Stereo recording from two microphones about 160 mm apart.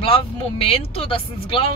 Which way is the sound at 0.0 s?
35° left (ahead or behind).